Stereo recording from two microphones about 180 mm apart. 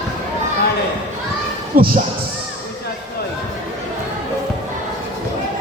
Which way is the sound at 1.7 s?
55° right (ahead or behind).